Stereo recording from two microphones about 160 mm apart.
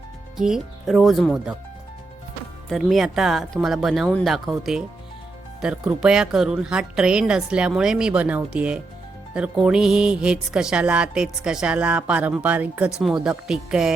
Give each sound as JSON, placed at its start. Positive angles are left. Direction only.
{"t": 0.3, "sound": "speech", "side_deg": -5}
{"t": 2.6, "sound": "a woman's voice", "side_deg": 0}